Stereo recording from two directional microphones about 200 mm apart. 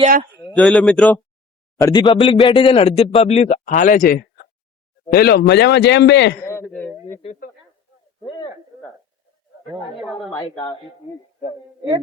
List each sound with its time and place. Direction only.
0.5 s a man's voice: centre (ahead or behind)
1.8 s speech: 20° left (ahead or behind); by 6.3 s 60° left (ahead or behind)
6.4 s a sound: 15° left (ahead or behind)